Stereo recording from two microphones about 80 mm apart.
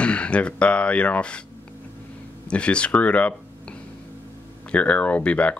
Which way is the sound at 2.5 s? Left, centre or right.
Centre.